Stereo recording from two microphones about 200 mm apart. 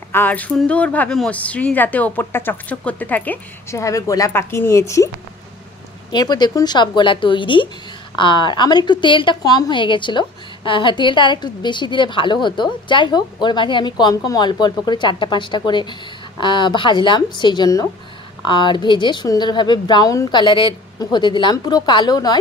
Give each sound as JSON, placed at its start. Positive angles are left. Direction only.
{"t": 0.1, "sound": "speech", "side_deg": 10}
{"t": 6.1, "sound": "a woman's voice", "side_deg": 20}